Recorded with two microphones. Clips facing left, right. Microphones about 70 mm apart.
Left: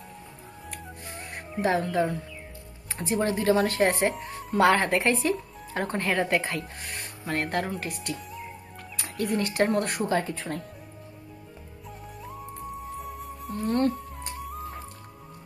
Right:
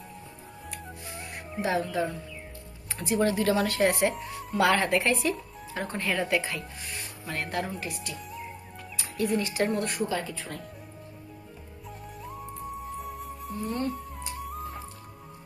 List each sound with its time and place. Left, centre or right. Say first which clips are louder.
0.7 s music: even; left
1.6 s speech: left 3 dB; left
3.0 s speech: right 1 dB; left
5.7 s speech: left 3 dB; left
12.2 s music: even; centre
13.6 s speech: left 6 dB; left
14.4 s music: even; centre